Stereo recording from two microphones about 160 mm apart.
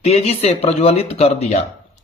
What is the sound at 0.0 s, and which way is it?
Speech, 40° left (ahead or behind).